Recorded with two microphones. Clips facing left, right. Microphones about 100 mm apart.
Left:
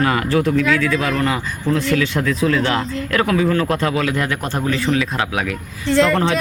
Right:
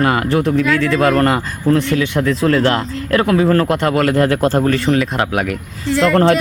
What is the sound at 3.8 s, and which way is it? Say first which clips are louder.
Speech: right 5 dB; 60° right (ahead or behind).